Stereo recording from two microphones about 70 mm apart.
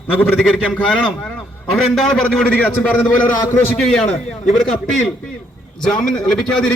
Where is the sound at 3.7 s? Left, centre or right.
Centre.